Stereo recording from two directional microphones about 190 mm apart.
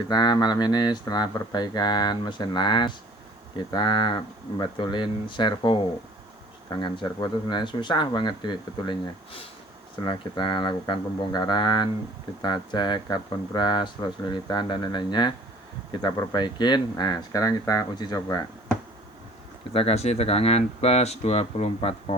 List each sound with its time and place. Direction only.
0.1 s speech: 20° left (ahead or behind)
10.1 s speech: 25° left (ahead or behind)
19.7 s speech: 30° left (ahead or behind)